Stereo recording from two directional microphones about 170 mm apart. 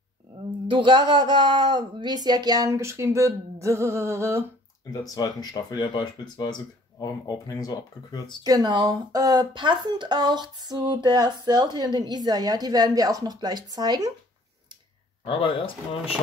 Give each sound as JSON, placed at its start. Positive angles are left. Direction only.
{"t": 0.7, "sound": "speech", "side_deg": -30}
{"t": 3.6, "sound": "music", "side_deg": -15}
{"t": 4.9, "sound": "speech", "side_deg": 20}
{"t": 8.5, "sound": "speech", "side_deg": -25}
{"t": 15.2, "sound": "speech", "side_deg": 30}